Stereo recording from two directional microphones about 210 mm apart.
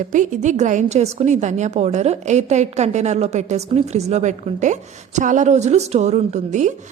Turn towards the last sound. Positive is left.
turn(degrees=-35)  # may be behind; listen again after turning